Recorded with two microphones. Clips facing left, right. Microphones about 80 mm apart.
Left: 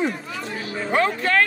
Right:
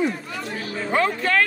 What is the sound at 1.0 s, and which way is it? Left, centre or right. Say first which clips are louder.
Music: left 1 dB; left.